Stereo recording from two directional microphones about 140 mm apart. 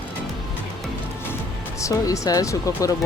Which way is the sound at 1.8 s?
25° left (ahead or behind).